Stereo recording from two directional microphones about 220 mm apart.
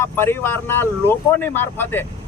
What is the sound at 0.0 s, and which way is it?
Speech, 10° left (ahead or behind).